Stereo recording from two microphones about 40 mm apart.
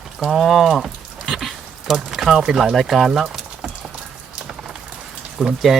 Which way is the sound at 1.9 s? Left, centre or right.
Centre.